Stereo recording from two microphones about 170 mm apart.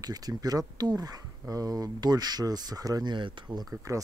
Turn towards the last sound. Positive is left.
turn(degrees=-20)  # may be behind; listen again after turning